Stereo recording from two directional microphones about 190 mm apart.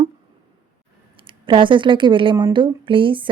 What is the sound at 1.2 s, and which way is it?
Speech, 25° right (ahead or behind).